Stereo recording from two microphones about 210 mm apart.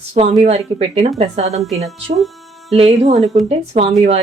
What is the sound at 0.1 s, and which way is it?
A woman's voice, 30° right (ahead or behind).